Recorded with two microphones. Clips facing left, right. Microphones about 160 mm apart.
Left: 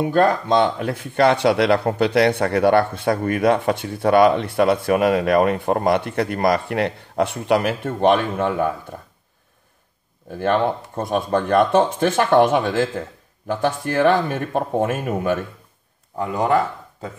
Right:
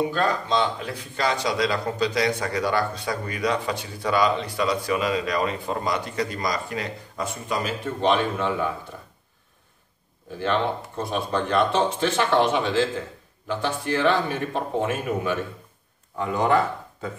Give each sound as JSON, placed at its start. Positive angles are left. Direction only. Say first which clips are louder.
{"t": 0.1, "sound": "speech", "louder": "left 7 dB", "side_deg": 55}
{"t": 10.4, "sound": "speech", "louder": "left 5 dB", "side_deg": 50}